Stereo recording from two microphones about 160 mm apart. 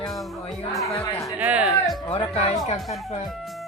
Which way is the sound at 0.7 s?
Centre (ahead or behind).